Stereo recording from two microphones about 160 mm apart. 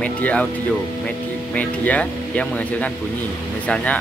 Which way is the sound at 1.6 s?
10° left (ahead or behind).